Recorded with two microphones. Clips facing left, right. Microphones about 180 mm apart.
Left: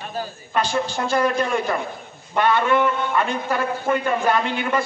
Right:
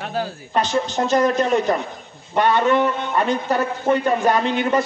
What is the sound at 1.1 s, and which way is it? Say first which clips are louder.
Speech: right 3 dB; 10° left (ahead or behind).